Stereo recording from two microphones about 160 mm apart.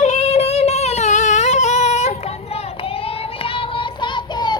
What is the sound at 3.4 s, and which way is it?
Child singing, 35° left (ahead or behind).